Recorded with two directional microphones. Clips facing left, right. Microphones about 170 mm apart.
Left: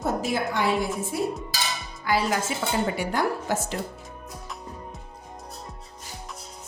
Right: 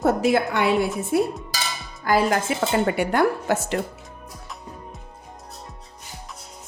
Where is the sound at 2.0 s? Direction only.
50° right (ahead or behind); by 3.8 s 70° right (ahead or behind).